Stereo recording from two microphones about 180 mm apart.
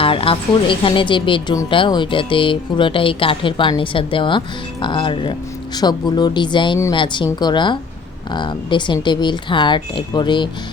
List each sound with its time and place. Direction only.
0.0 s speech: 30° left (ahead or behind)